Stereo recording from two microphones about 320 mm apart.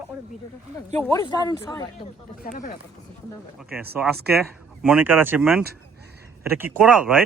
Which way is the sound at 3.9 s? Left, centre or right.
Centre.